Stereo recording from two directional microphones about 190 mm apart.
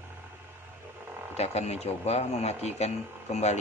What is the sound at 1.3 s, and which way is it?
Speech, 35° left (ahead or behind).